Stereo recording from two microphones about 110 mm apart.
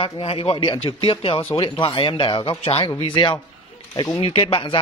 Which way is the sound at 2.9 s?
50° left (ahead or behind).